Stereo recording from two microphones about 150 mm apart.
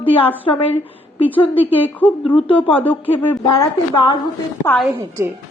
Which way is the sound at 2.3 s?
35° left (ahead or behind).